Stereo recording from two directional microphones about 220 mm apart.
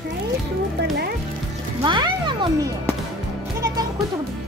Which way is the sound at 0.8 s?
50° right (ahead or behind).